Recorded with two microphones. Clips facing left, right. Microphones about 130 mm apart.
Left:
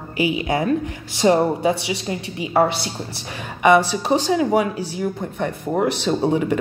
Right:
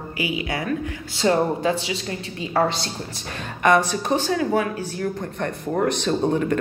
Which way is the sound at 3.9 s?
15° left (ahead or behind).